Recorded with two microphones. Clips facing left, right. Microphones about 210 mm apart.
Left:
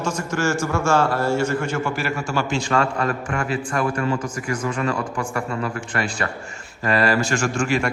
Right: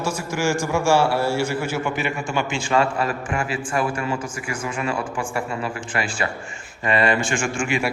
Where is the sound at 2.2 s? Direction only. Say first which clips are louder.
Left 1 dB; 40° left (ahead or behind).